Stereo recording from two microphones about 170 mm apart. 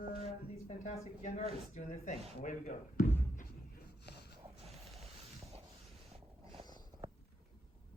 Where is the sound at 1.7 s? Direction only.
45° left (ahead or behind).